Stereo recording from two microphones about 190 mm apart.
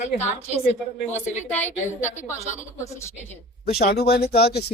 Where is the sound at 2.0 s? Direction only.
40° left (ahead or behind).